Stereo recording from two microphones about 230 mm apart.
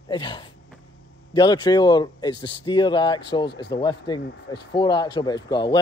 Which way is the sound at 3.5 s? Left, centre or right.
Left.